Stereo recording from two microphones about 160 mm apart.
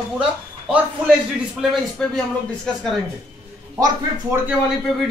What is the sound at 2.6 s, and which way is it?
Speech, 5° left (ahead or behind).